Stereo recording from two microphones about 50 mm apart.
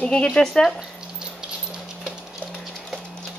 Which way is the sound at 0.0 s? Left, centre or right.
Left.